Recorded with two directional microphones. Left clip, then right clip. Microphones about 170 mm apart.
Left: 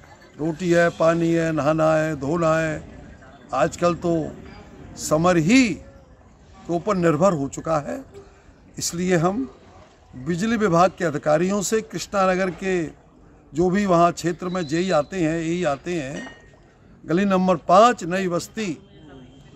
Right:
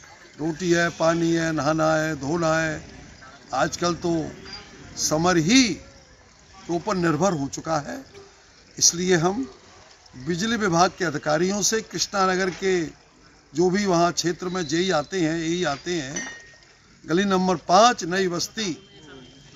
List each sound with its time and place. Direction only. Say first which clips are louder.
0.4 s speech: left 3 dB; 40° left (ahead or behind)
6.9 s speech: left 4 dB; 40° left (ahead or behind)